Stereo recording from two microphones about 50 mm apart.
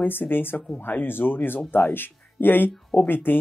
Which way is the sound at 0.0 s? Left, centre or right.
Left.